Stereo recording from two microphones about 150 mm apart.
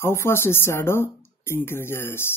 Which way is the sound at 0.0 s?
15° left (ahead or behind).